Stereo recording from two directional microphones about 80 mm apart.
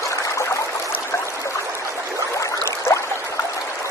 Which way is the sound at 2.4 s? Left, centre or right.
Left.